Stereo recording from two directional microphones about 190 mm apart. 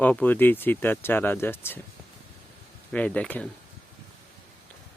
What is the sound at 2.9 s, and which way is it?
Speech, 5° left (ahead or behind).